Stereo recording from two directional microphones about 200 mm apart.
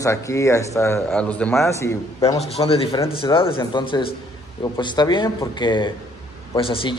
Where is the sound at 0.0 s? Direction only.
15° left (ahead or behind).